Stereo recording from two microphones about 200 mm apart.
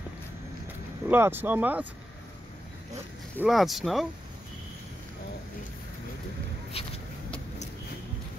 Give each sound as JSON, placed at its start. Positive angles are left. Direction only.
{"t": 1.0, "sound": "speech", "side_deg": -10}
{"t": 3.4, "sound": "speech", "side_deg": 0}
{"t": 6.7, "sound": "a sound", "side_deg": 30}